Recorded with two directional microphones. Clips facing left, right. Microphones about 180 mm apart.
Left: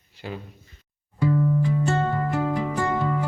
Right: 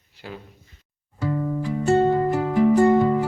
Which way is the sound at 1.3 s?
30° right (ahead or behind).